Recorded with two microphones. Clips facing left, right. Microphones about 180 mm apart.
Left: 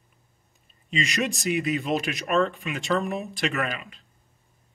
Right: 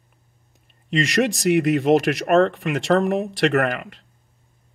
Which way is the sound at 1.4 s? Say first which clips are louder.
Right 10 dB; 70° right (ahead or behind).